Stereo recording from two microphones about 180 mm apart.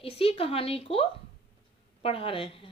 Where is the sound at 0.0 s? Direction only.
30° left (ahead or behind).